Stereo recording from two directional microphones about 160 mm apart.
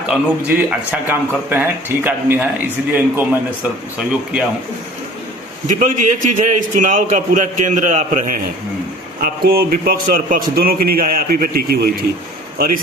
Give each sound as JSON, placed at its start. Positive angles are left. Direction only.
{"t": 0.1, "sound": "a man's voice", "side_deg": -5}
{"t": 3.9, "sound": "a man's voice", "side_deg": -10}
{"t": 5.6, "sound": "a man's voice", "side_deg": -50}
{"t": 9.2, "sound": "a man's voice", "side_deg": -70}
{"t": 12.5, "sound": "a man's voice", "side_deg": -60}